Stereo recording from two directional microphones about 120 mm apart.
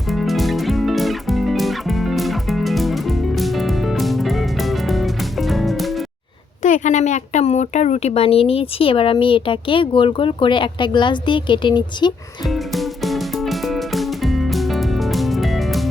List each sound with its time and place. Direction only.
0.1 s music: centre (ahead or behind)
6.6 s a woman's voice: 90° left; by 12.1 s 40° left (ahead or behind)
12.5 s music: centre (ahead or behind)